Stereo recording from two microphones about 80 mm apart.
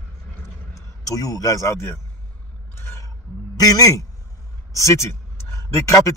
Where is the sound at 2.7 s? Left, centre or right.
Left.